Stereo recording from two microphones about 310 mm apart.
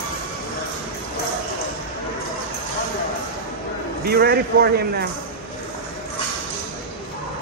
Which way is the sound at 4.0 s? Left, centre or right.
Right.